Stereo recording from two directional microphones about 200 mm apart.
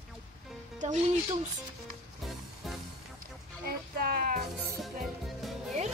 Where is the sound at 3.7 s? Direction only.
50° right (ahead or behind).